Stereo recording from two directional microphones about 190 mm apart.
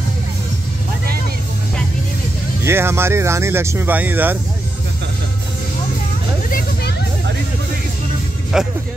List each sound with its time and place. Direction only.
2.6 s speech: 15° right (ahead or behind)
6.5 s music: 60° left (ahead or behind)
8.5 s speech: 5° right (ahead or behind)